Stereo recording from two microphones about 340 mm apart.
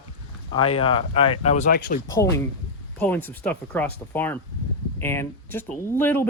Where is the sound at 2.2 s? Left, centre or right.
Centre.